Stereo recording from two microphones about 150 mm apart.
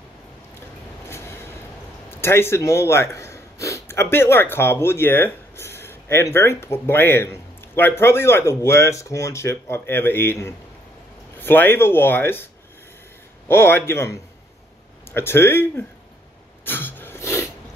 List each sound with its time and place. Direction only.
1.0 s train: 15° left (ahead or behind)
2.0 s speech: 15° left (ahead or behind)
13.5 s speech: 15° left (ahead or behind)
16.6 s a sound: 15° left (ahead or behind)